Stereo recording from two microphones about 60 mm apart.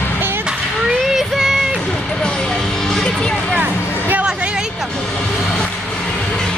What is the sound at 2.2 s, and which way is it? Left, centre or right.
Music, centre.